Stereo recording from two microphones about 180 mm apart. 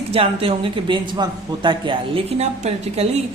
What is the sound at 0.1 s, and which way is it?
A woman's voice, 30° right (ahead or behind).